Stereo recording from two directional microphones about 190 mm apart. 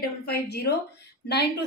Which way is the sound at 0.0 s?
55° left (ahead or behind).